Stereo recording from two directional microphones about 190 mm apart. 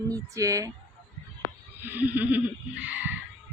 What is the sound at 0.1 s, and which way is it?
Speech, 15° right (ahead or behind).